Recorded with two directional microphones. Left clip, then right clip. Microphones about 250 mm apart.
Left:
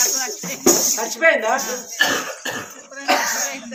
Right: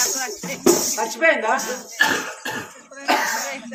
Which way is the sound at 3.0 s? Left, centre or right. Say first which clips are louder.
Left 1 dB; centre.